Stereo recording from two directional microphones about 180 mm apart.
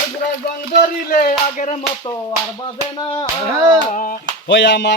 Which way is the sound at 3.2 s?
15° right (ahead or behind).